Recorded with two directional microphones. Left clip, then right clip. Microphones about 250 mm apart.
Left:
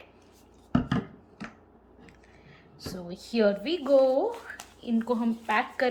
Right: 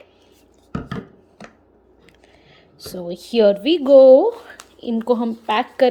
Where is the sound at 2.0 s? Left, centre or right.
Right.